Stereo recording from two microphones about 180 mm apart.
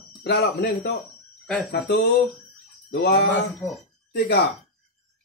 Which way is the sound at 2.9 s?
65° left (ahead or behind).